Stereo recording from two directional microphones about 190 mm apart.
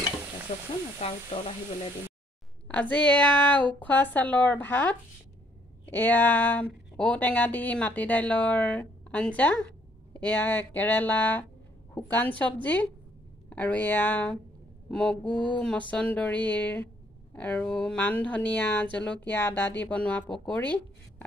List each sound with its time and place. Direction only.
0.9 s sizzle: 30° left (ahead or behind)
2.7 s speech: 5° left (ahead or behind)
14.9 s mantra: 5° left (ahead or behind)
15.9 s speech: 5° left (ahead or behind)